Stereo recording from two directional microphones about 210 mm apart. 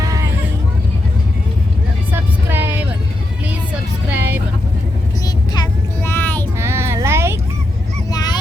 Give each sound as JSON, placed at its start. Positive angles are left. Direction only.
{"t": 0.0, "sound": "vehicle", "side_deg": -15}
{"t": 2.1, "sound": "vehicle", "side_deg": -10}
{"t": 4.1, "sound": "vehicle", "side_deg": -10}
{"t": 5.2, "sound": "vehicle", "side_deg": 15}
{"t": 6.6, "sound": "a sound", "side_deg": -10}
{"t": 8.1, "sound": "honk", "side_deg": 20}